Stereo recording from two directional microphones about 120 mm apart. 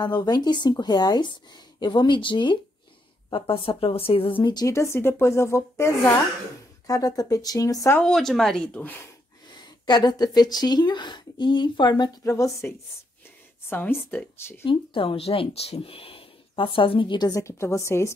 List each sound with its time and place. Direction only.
0.0 s speech: 35° left (ahead or behind)
4.6 s a woman's voice: 25° left (ahead or behind)
8.0 s speech: 5° left (ahead or behind)
9.6 s speech: 35° left (ahead or behind); by 14.2 s 15° left (ahead or behind)
14.7 s speech: 45° left (ahead or behind)
17.3 s a woman's voice: 25° left (ahead or behind)